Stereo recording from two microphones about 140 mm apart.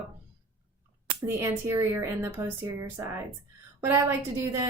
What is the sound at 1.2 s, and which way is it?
A woman's voice, 20° right (ahead or behind).